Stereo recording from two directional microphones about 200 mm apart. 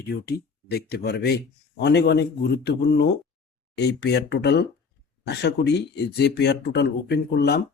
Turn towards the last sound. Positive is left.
turn(degrees=55)  # may be behind; listen again after turning